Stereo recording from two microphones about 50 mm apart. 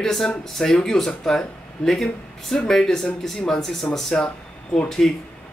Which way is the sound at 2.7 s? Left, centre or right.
Centre.